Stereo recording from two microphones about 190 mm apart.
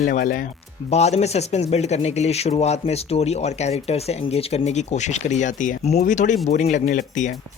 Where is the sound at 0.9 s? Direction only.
35° left (ahead or behind).